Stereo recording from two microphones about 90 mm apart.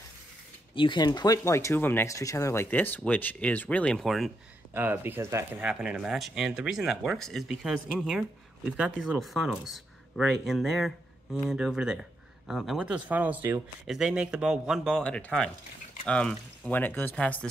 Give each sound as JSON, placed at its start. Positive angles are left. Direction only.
{"t": 0.7, "sound": "speech", "side_deg": 60}
{"t": 2.0, "sound": "speech", "side_deg": 35}
{"t": 4.0, "sound": "speech", "side_deg": 0}
{"t": 4.7, "sound": "speech", "side_deg": -25}
{"t": 5.6, "sound": "speech", "side_deg": -10}
{"t": 13.8, "sound": "speech", "side_deg": -5}
{"t": 15.0, "sound": "speech", "side_deg": 10}
{"t": 16.7, "sound": "speech", "side_deg": 20}